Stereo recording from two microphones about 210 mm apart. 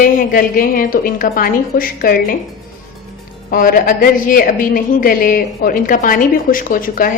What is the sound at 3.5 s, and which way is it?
A woman's voice, 40° left (ahead or behind).